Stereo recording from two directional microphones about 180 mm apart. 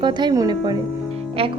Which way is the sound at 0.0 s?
25° right (ahead or behind).